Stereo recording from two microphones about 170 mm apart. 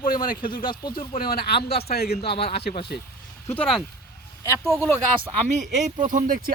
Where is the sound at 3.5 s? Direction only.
5° left (ahead or behind).